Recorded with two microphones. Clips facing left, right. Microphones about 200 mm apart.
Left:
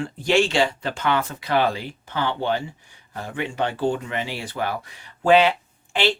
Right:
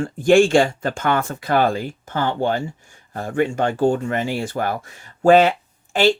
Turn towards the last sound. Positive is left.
turn(degrees=-45)  # may be behind; listen again after turning